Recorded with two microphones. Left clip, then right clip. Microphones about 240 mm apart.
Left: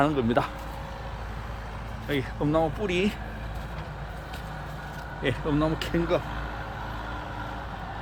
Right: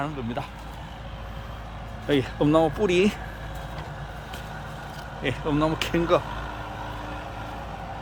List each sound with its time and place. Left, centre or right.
0.0 s speech: left
2.0 s speech: right
5.2 s speech: centre